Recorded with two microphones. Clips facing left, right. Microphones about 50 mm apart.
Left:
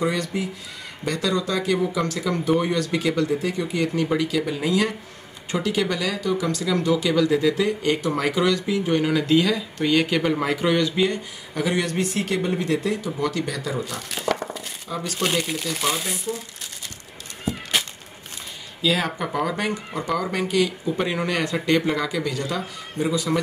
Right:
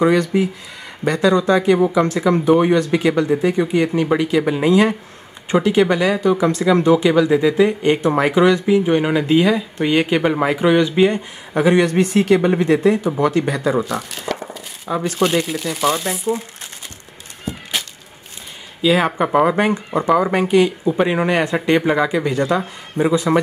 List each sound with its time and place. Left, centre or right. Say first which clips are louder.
0.2 s speech: right 9 dB; right
14.2 s a sound: left 6 dB; centre
14.9 s speech: right 9 dB; right
15.1 s speech: right 5 dB; centre
17.5 s cat: even; centre
18.8 s speech: right 7 dB; right
19.1 s speech: right 10 dB; right